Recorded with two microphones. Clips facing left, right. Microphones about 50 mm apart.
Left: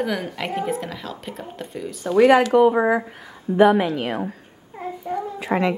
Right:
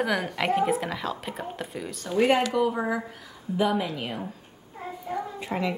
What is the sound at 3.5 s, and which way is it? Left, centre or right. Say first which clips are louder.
Speech: left 10 dB; left.